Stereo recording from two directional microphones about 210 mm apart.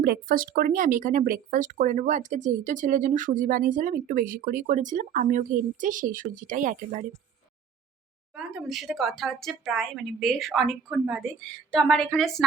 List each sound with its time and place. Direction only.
0.0 s speech: 45° right (ahead or behind)
8.4 s speech: centre (ahead or behind)